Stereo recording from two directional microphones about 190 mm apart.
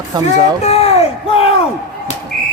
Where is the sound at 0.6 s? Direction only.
30° left (ahead or behind).